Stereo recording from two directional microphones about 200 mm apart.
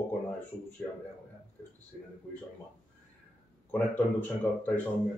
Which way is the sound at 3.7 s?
10° left (ahead or behind).